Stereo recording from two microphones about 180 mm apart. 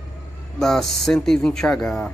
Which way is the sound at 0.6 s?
Centre (ahead or behind).